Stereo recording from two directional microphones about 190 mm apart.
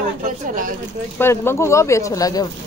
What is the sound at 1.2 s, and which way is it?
Speech, 10° left (ahead or behind).